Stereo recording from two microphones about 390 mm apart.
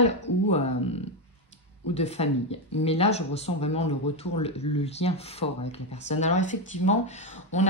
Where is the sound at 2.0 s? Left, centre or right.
Centre.